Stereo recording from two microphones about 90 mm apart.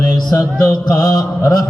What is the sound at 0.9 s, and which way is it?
Mantra, 40° left (ahead or behind).